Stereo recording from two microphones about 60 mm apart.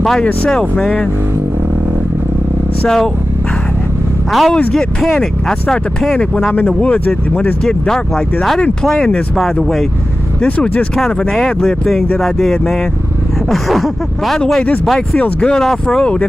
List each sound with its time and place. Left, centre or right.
4.3 s speech: centre
6.8 s speech: left
7.6 s speech: centre
11.0 s speech: centre
15.1 s speech: left
15.5 s speech: centre